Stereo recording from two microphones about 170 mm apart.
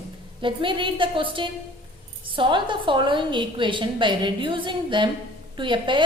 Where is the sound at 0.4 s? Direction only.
30° right (ahead or behind).